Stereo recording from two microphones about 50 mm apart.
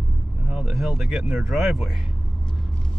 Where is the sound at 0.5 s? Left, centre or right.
Centre.